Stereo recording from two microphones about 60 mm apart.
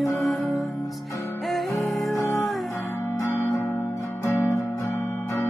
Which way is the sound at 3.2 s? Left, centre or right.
Left.